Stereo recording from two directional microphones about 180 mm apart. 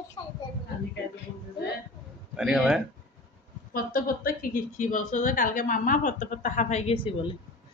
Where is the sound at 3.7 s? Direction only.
50° left (ahead or behind); by 7.3 s 30° left (ahead or behind).